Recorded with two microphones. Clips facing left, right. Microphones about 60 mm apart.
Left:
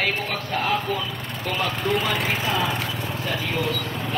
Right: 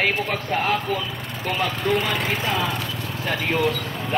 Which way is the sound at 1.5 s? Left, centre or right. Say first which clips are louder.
Right 2 dB; centre.